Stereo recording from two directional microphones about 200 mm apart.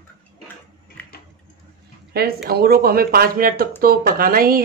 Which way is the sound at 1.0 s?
5° left (ahead or behind).